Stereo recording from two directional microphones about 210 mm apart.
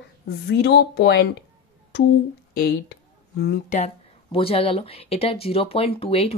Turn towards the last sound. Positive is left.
turn(degrees=30)  # may be behind; listen again after turning